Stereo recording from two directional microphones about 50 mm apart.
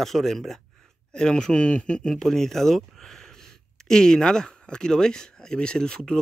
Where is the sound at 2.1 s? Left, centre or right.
Centre.